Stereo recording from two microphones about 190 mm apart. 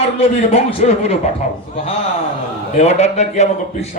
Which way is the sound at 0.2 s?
30° left (ahead or behind).